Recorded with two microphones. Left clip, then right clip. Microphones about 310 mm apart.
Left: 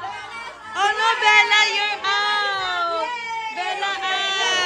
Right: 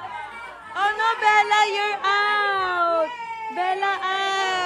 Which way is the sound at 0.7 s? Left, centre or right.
Centre.